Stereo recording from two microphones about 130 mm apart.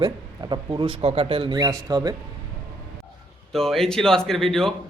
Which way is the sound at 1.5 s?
30° right (ahead or behind).